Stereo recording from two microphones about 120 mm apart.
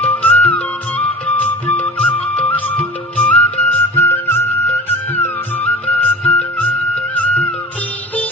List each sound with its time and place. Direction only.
0.0 s music: 15° left (ahead or behind)